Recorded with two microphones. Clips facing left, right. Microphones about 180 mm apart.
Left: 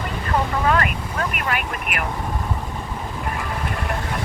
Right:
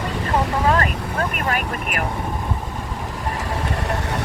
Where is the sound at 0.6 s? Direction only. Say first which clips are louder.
Right 1 dB; 30° right (ahead or behind).